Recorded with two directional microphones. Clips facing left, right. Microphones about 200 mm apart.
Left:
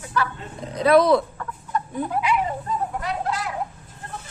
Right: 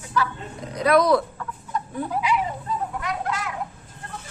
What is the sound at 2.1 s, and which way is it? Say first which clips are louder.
Speech: left 1 dB; 55° left (ahead or behind).